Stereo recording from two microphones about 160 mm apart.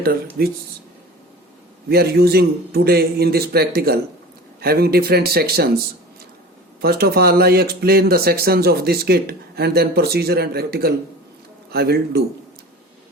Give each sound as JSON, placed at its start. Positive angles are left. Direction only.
{"t": 0.4, "sound": "a man's voice", "side_deg": -80}
{"t": 1.9, "sound": "speech", "side_deg": -75}
{"t": 6.8, "sound": "a man's voice", "side_deg": -80}